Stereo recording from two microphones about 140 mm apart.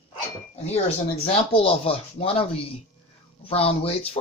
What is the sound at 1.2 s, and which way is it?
Speech, 40° left (ahead or behind).